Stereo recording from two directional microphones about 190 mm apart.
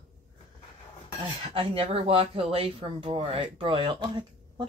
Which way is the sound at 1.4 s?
30° right (ahead or behind).